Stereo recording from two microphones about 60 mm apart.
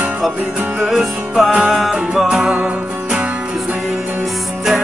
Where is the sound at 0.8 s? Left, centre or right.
Centre.